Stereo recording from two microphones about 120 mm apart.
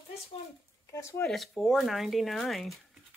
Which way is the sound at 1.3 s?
Centre (ahead or behind).